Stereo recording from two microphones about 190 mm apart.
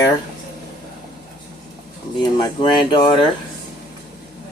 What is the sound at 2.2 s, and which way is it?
Speech, 25° left (ahead or behind).